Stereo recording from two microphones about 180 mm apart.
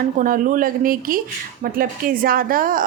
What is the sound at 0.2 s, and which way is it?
A woman's voice, 50° right (ahead or behind).